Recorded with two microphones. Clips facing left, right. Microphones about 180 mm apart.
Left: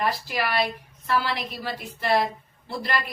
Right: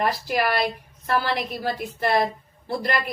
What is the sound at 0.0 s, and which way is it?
A woman's voice, 50° right (ahead or behind).